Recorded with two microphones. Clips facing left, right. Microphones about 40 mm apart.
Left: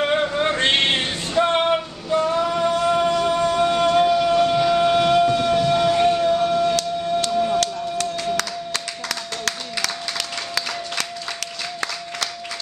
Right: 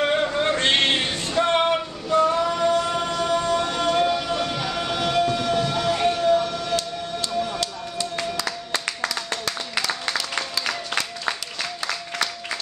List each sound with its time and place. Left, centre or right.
0.0 s male singing: centre
3.8 s train: centre
7.2 s a sound: centre
7.6 s clapping: left